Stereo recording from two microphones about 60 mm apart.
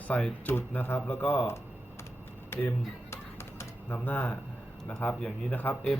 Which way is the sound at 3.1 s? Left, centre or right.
Left.